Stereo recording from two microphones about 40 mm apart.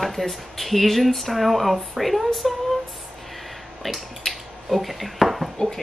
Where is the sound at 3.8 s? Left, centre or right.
Centre.